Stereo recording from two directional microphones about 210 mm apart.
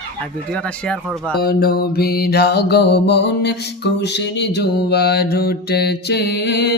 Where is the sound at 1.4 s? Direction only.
45° left (ahead or behind).